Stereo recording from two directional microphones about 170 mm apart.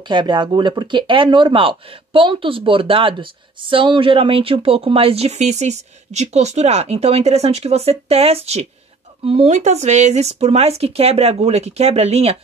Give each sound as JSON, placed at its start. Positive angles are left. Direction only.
{"t": 0.0, "sound": "speech", "side_deg": -25}